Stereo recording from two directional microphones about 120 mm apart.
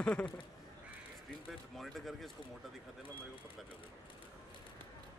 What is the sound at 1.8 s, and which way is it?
Speech, centre (ahead or behind).